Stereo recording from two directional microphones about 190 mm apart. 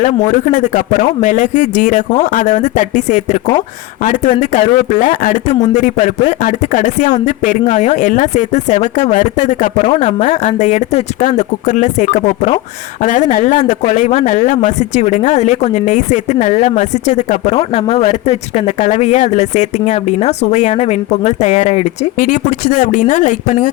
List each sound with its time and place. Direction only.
0.0 s speech: 40° left (ahead or behind)